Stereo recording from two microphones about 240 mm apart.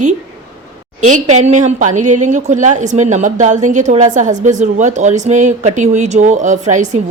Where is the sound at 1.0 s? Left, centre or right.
Right.